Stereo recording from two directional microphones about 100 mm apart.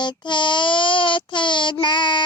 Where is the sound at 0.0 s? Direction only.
50° left (ahead or behind).